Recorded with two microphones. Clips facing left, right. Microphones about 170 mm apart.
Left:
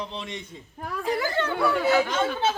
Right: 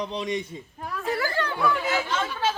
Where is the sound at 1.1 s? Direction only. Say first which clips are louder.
Left 1 dB; 20° left (ahead or behind).